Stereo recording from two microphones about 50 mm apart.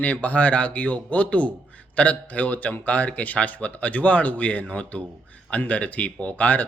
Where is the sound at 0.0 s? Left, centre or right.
Left.